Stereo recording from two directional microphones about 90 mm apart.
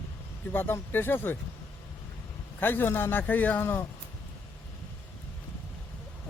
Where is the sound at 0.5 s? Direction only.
25° left (ahead or behind).